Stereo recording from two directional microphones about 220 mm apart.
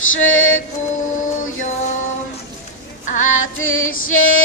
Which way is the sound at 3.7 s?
65° left (ahead or behind).